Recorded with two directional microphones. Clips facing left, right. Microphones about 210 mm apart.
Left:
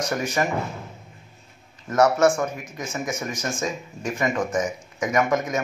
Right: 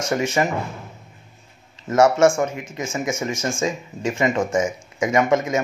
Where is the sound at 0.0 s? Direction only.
25° right (ahead or behind).